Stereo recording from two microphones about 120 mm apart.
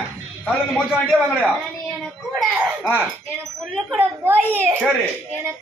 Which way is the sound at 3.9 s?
20° right (ahead or behind).